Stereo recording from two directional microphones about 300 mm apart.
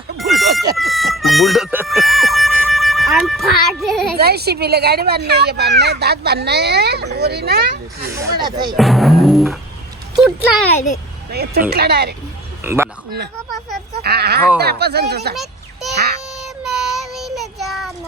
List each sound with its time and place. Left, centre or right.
0.2 s a sound: centre
0.8 s emergency vehicle: centre
4.2 s speech: right
8.1 s speech: centre
8.7 s speech: centre
10.8 s a child's voice: left
11.3 s speech: right
12.6 s a man's voice: centre
14.0 s speech: right
15.4 s children playing: centre
16.3 s child singing: centre